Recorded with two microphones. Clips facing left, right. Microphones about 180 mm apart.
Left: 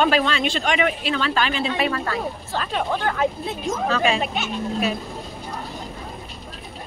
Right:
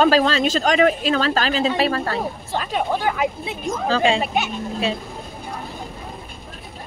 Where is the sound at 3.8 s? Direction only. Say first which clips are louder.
Right 3 dB; 30° right (ahead or behind).